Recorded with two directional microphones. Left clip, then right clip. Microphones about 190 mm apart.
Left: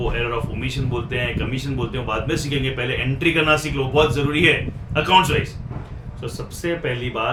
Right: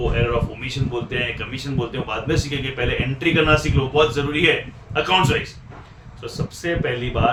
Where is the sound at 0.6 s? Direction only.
Centre (ahead or behind).